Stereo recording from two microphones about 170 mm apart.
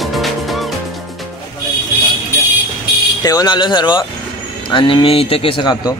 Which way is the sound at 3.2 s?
20° left (ahead or behind).